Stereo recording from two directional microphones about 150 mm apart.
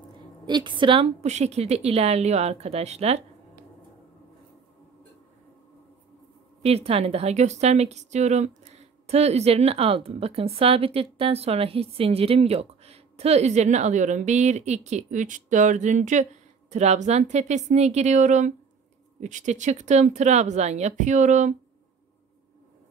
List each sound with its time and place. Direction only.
0.5 s a woman's voice: 30° right (ahead or behind)
6.6 s a woman's voice: 40° right (ahead or behind)